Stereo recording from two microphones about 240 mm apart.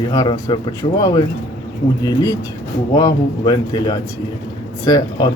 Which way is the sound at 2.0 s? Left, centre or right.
Centre.